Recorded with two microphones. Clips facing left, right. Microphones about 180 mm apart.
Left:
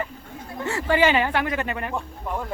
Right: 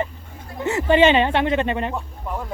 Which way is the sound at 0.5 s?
20° right (ahead or behind).